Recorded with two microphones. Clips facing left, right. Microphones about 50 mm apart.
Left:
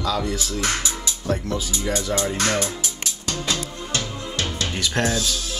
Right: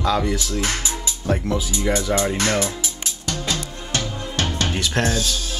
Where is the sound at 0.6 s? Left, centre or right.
Right.